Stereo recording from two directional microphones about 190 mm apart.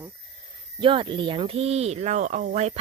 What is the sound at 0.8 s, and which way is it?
Speech, 25° right (ahead or behind).